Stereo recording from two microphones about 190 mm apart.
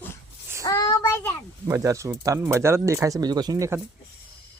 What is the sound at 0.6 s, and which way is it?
Child singing, 20° left (ahead or behind).